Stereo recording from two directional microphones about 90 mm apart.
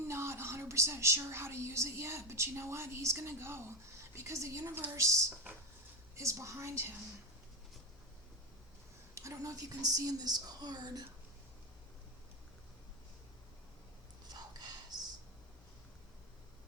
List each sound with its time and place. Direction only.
0.1 s a woman's voice: 30° right (ahead or behind)
9.1 s speech: 35° right (ahead or behind)